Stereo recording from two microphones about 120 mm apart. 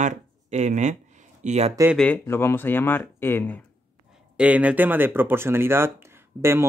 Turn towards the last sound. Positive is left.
turn(degrees=-20)  # may be behind; listen again after turning